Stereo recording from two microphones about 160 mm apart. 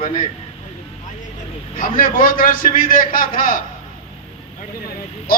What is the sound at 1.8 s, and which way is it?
Speech, 60° left (ahead or behind).